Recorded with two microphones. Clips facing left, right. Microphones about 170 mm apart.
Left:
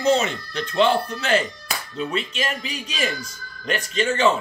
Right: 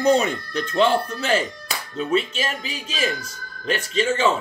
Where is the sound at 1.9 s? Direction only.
35° right (ahead or behind).